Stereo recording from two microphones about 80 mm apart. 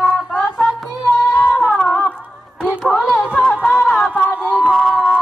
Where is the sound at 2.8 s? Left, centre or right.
Centre.